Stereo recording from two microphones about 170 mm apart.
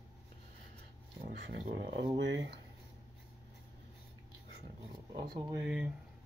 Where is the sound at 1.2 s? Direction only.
65° right (ahead or behind); by 2.6 s 90° right.